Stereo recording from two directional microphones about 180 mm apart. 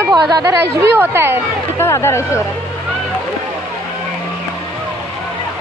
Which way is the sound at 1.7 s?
15° left (ahead or behind).